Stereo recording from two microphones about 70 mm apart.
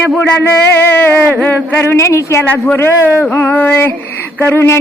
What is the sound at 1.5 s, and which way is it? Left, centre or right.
Speech, left.